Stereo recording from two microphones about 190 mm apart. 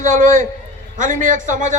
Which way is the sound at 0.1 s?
40° right (ahead or behind).